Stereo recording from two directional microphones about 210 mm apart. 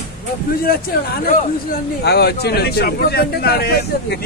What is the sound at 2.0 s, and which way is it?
A man's voice, 50° left (ahead or behind).